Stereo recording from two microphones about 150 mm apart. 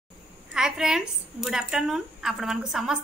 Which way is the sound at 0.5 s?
5° right (ahead or behind).